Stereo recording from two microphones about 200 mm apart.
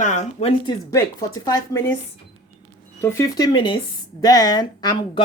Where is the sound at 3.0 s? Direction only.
15° left (ahead or behind).